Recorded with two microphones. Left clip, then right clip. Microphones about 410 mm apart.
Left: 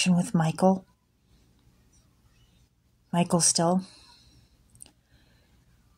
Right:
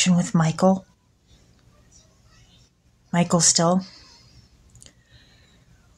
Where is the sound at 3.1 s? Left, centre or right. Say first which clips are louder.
Right 5 dB; left.